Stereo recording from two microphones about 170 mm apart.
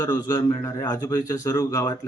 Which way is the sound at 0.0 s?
25° left (ahead or behind).